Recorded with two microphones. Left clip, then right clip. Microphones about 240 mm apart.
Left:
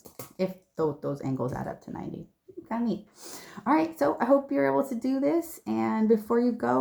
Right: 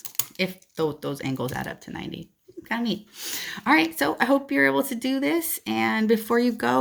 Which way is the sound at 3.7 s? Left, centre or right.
Right.